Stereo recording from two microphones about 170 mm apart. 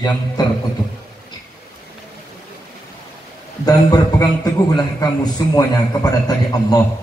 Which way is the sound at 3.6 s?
20° left (ahead or behind).